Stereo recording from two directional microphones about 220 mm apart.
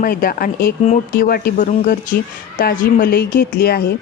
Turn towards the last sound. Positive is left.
turn(degrees=45)  # may be behind; listen again after turning